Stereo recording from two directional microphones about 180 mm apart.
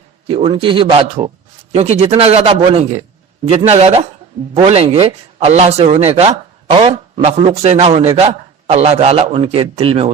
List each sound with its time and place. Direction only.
0.3 s a man's voice: 30° right (ahead or behind)